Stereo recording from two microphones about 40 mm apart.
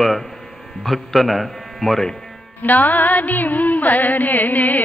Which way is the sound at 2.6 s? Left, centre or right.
Left.